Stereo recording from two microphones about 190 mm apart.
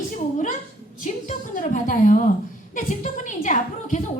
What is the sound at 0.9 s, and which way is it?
A woman's voice, 40° left (ahead or behind).